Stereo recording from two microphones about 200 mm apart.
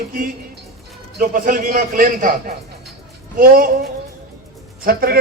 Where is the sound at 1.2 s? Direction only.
45° right (ahead or behind).